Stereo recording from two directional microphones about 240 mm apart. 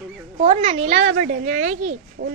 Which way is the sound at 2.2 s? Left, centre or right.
Right.